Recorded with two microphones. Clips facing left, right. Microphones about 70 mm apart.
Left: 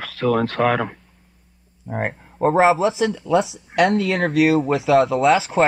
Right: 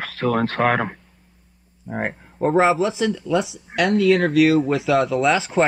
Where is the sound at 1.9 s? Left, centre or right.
Centre.